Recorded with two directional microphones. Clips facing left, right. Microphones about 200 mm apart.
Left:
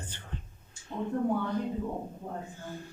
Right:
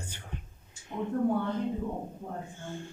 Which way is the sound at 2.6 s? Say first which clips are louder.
Right 1 dB; 25° right (ahead or behind).